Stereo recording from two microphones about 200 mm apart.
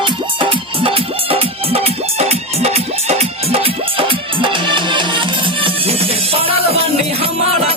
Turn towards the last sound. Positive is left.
turn(degrees=-30)  # may be behind; listen again after turning